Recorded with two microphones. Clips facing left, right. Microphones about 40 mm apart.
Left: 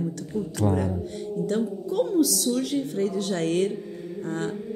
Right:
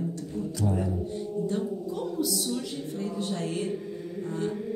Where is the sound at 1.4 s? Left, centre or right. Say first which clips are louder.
Left 5 dB; left.